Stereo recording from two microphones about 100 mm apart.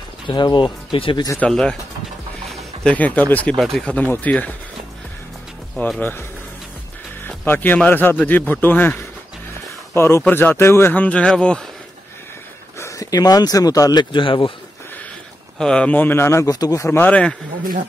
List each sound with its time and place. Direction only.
0.3 s speech: 50° left (ahead or behind)
0.9 s a man's voice: 65° left (ahead or behind)
1.4 s speech: 10° left (ahead or behind)
2.8 s speech: 15° left (ahead or behind)
3.5 s speech: centre (ahead or behind)
3.9 s speech: 15° left (ahead or behind)
5.9 s speech: 20° left (ahead or behind)
7.2 s a man's voice: 20° left (ahead or behind)
12.7 s speech: 30° left (ahead or behind)
14.1 s a man's voice: 55° left (ahead or behind)
15.5 s speech: 10° left (ahead or behind); by 17.0 s 30° left (ahead or behind)
17.0 s speech: 10° left (ahead or behind)